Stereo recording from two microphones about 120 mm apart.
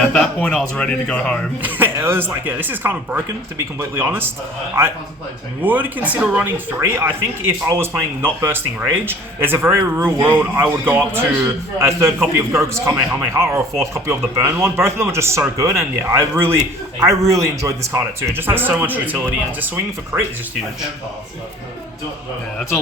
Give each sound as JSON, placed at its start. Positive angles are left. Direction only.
{"t": 0.0, "sound": "speech", "side_deg": 10}
{"t": 1.6, "sound": "speech", "side_deg": -20}